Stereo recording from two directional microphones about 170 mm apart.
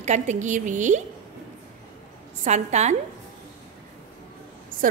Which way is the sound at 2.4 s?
40° right (ahead or behind).